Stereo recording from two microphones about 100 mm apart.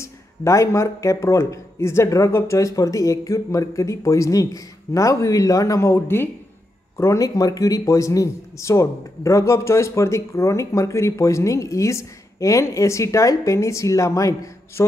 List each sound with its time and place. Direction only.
0.0 s speech: 30° left (ahead or behind)
7.0 s speech: 30° left (ahead or behind)